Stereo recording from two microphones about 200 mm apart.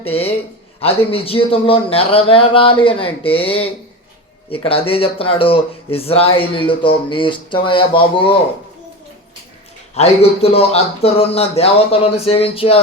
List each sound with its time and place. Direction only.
0.0 s speech: 30° left (ahead or behind)
9.9 s speech: 30° left (ahead or behind)